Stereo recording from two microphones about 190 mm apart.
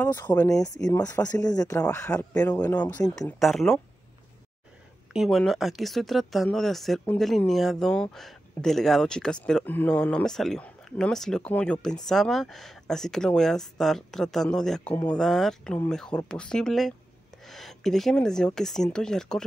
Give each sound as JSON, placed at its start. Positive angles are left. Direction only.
{"t": 0.0, "sound": "speech", "side_deg": 10}
{"t": 0.8, "sound": "speech", "side_deg": 20}
{"t": 5.1, "sound": "speech", "side_deg": 0}